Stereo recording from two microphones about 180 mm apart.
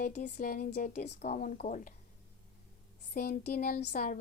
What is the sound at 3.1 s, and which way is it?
Speech, 60° left (ahead or behind).